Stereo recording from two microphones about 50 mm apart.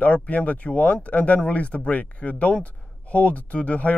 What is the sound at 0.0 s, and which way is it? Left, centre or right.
Speech, left.